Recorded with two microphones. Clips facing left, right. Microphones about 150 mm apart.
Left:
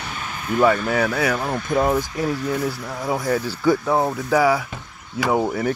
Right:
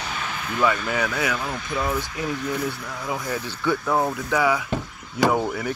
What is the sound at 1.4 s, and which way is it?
Speech, 45° left (ahead or behind).